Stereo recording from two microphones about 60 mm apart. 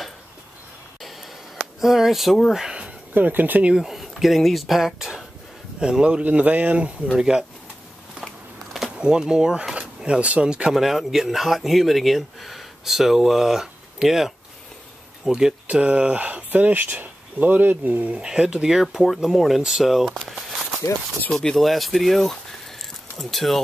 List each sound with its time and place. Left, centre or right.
1.8 s speech: centre
2.5 s speech: centre
3.2 s speech: right
3.6 s speech: centre
8.9 s speech: centre
10.7 s a man's voice: centre; by 18.2 s right
18.2 s speech: centre
21.3 s speech: centre